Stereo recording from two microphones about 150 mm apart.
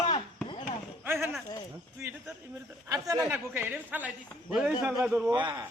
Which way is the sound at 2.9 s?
25° right (ahead or behind).